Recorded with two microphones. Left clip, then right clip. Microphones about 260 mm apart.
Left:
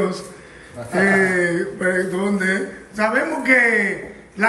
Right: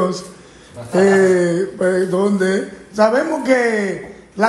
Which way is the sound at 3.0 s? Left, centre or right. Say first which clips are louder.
Right 5 dB; centre.